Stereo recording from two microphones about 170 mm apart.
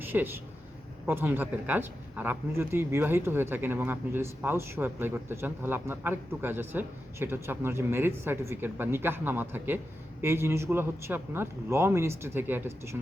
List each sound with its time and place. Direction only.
0.0 s speech: 10° right (ahead or behind)